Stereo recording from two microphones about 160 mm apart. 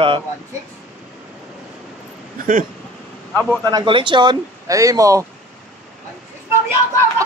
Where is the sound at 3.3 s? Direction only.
10° left (ahead or behind).